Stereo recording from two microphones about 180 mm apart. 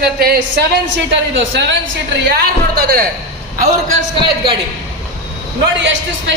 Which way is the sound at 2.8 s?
60° right (ahead or behind).